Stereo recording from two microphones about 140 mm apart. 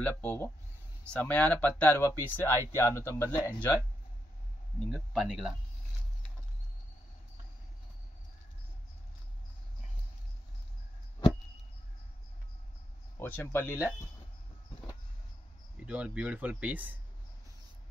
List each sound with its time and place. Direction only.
0.2 s speech: 10° left (ahead or behind)
4.7 s speech: centre (ahead or behind)
13.2 s speech: 15° left (ahead or behind)
15.8 s speech: 10° right (ahead or behind)